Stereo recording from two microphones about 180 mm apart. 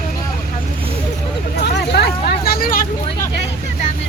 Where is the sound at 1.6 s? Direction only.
65° left (ahead or behind).